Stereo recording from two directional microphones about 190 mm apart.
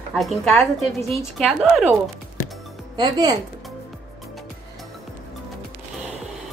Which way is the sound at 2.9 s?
20° right (ahead or behind).